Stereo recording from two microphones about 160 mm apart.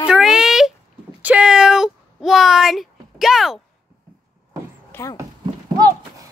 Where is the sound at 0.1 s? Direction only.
5° right (ahead or behind).